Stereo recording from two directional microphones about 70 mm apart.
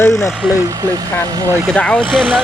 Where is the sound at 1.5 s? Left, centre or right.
Right.